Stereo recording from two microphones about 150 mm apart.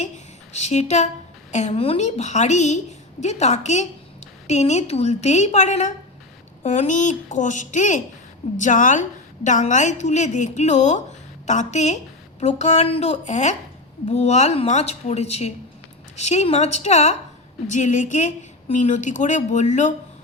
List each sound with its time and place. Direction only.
0.5 s a woman's voice: 50° left (ahead or behind)